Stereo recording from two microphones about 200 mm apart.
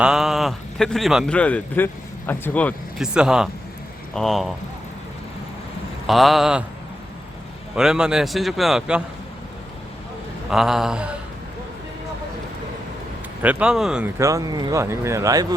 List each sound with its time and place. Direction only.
0.0 s a man's voice: 5° right (ahead or behind)
3.0 s a man's voice: 5° right (ahead or behind)
6.1 s a man's voice: centre (ahead or behind)
7.8 s a man's voice: 5° right (ahead or behind)
10.5 s a man's voice: centre (ahead or behind)
13.4 s a man's voice: 5° right (ahead or behind)
14.2 s speech: 15° right (ahead or behind)